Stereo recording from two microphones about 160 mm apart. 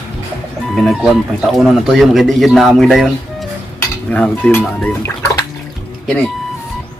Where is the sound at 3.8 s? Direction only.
10° left (ahead or behind).